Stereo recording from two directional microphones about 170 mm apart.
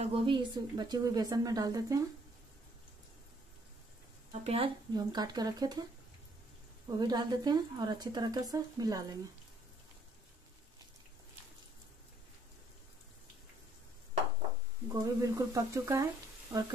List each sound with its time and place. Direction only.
0.0 s speech: 30° right (ahead or behind)
4.3 s a woman's voice: 40° right (ahead or behind)
4.9 s speech: 25° right (ahead or behind)
7.0 s speech: 25° right (ahead or behind)
14.9 s speech: 20° right (ahead or behind)